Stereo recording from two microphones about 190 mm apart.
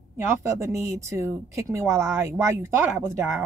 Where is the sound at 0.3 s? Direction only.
15° right (ahead or behind).